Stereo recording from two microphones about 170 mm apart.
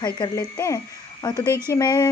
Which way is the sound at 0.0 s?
25° left (ahead or behind).